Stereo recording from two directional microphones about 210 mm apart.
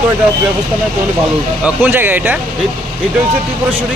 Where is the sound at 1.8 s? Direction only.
10° right (ahead or behind).